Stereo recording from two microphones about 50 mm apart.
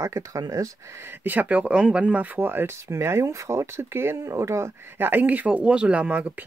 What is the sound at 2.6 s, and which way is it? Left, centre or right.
Speech, right.